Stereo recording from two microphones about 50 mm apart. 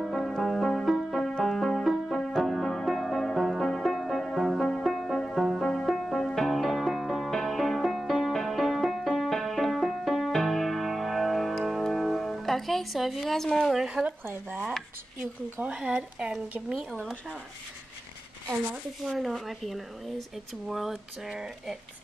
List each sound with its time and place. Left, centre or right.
0.0 s music: centre
14.0 s speech: centre
15.6 s speech: right
16.7 s speech: centre
19.1 s speech: centre